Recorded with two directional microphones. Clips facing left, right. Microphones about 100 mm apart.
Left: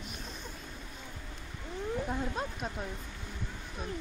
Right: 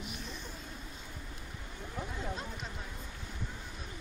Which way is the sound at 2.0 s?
50° left (ahead or behind).